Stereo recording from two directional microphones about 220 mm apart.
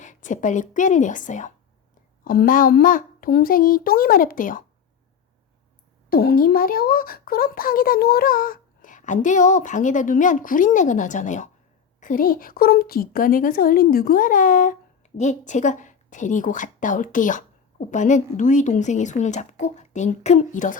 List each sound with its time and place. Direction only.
0.0 s a woman's voice: 35° left (ahead or behind)
6.1 s a woman's voice: 40° left (ahead or behind)